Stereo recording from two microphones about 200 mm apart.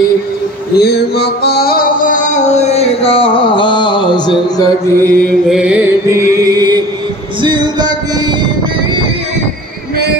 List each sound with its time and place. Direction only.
0.7 s music: 55° left (ahead or behind); by 4.2 s 20° left (ahead or behind)
4.6 s mantra: 10° left (ahead or behind)
5.5 s music: 5° right (ahead or behind)
6.0 s music: 15° right (ahead or behind)